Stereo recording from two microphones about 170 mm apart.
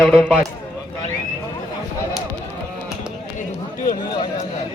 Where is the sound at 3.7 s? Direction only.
55° left (ahead or behind).